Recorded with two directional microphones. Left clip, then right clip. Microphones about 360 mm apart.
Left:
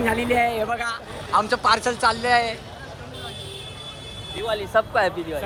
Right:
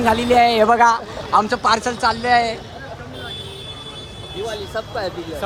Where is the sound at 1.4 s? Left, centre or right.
Centre.